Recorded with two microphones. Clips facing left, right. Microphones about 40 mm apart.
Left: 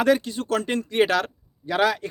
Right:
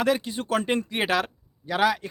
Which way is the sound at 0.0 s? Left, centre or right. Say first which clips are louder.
Left 4 dB; centre.